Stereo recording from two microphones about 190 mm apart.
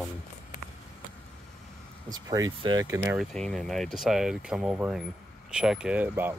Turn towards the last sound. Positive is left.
turn(degrees=-10)  # may be behind; listen again after turning